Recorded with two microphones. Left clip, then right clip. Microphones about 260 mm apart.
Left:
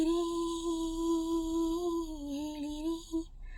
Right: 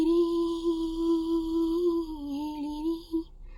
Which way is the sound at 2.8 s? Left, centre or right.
Left.